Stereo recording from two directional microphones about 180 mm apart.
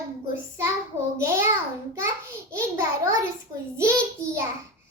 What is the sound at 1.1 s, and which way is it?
Speech, 15° right (ahead or behind).